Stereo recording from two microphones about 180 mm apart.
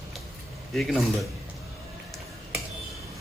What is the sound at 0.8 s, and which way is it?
Speech, centre (ahead or behind).